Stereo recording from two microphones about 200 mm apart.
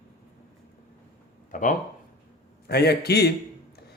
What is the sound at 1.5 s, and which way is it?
Speech, 40° left (ahead or behind).